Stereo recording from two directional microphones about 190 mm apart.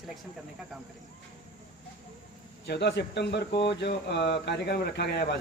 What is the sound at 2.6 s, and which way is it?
Speech, 60° left (ahead or behind).